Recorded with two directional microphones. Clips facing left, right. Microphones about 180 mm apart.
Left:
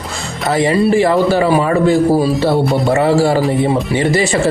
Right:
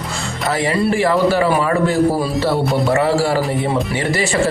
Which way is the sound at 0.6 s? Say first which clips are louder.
Left 5 dB; 20° left (ahead or behind).